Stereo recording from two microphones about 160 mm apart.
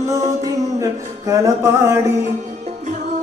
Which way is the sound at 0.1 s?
20° right (ahead or behind).